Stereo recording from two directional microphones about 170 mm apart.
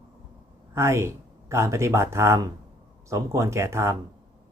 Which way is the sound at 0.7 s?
15° right (ahead or behind).